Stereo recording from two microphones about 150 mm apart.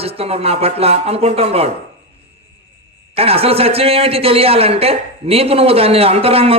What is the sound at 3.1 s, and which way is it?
Speech, 40° right (ahead or behind).